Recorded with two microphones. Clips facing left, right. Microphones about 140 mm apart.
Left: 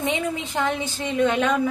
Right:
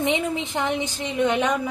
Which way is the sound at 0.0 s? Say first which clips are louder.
Right 2 dB; 20° right (ahead or behind).